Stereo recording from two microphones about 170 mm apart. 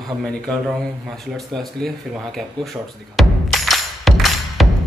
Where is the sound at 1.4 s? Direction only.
Centre (ahead or behind).